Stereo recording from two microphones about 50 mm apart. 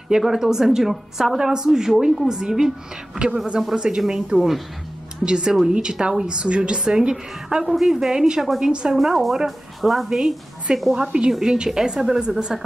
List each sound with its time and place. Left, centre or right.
0.3 s a woman's voice: centre
8.9 s a woman's voice: centre
11.0 s a woman's voice: centre